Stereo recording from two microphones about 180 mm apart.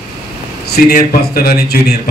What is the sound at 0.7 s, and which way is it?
A man's voice, 60° left (ahead or behind).